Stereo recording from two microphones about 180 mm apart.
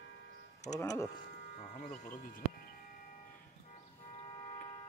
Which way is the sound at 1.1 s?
55° left (ahead or behind).